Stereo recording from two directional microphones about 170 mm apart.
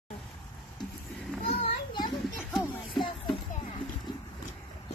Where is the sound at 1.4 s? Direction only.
35° left (ahead or behind).